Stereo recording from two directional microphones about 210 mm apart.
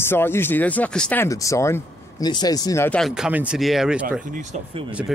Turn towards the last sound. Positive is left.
turn(degrees=-5)  # may be behind; listen again after turning